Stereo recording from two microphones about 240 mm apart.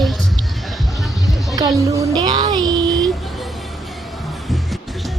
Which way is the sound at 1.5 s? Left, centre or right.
Centre.